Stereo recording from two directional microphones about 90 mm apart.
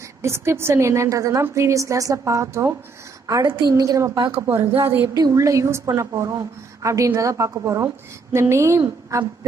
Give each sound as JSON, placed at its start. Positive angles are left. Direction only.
{"t": 0.2, "sound": "a woman's voice", "side_deg": -30}
{"t": 3.4, "sound": "a woman's voice", "side_deg": -55}
{"t": 4.5, "sound": "a woman's voice", "side_deg": -25}
{"t": 5.1, "sound": "a woman's voice", "side_deg": -40}